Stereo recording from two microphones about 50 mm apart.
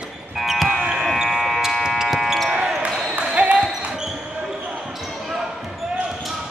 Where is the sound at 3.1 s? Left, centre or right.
Right.